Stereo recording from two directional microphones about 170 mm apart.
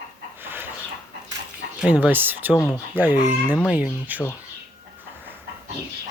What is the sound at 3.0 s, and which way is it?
Speech, 10° right (ahead or behind).